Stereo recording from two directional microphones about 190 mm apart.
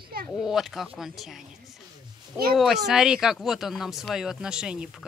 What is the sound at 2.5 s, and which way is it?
Speech, centre (ahead or behind).